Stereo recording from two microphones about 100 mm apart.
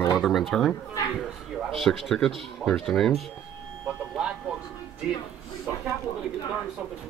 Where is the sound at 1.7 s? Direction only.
Centre (ahead or behind).